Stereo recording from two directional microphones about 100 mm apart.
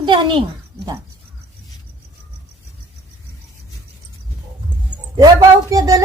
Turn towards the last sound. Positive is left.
turn(degrees=-40)  # may be behind; listen again after turning